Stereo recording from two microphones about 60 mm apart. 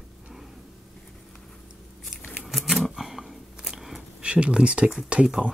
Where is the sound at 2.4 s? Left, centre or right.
Centre.